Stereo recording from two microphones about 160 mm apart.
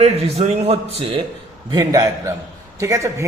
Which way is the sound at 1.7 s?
25° right (ahead or behind).